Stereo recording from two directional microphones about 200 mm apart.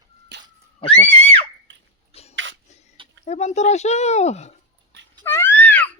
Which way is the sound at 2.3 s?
65° right (ahead or behind).